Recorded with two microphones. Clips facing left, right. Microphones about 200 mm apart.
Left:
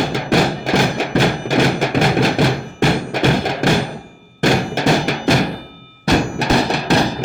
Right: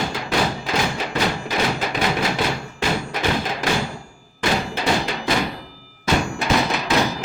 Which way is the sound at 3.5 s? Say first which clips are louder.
Left 6 dB; 65° left (ahead or behind).